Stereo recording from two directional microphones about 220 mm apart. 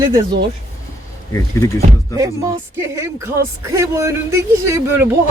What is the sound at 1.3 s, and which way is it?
Speech, 15° left (ahead or behind).